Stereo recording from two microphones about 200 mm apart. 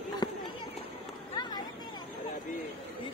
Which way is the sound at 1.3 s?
20° left (ahead or behind).